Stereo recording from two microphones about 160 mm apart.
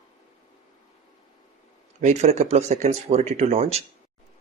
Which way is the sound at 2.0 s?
45° right (ahead or behind).